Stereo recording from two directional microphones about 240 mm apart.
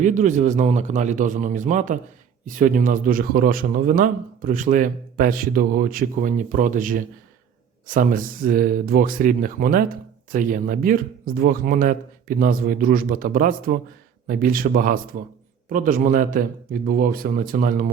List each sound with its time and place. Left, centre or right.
0.0 s speech: right